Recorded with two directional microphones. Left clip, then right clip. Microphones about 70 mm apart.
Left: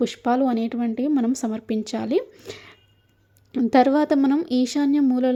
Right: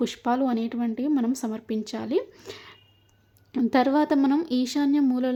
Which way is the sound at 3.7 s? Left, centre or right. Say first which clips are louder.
Left 4 dB; left.